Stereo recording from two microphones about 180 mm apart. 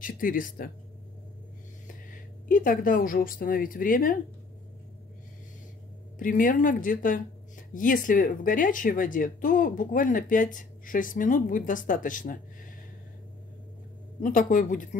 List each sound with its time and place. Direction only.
0.0 s speech: 50° left (ahead or behind)
2.4 s speech: 50° left (ahead or behind)
6.1 s speech: 50° left (ahead or behind)
14.2 s speech: 45° left (ahead or behind)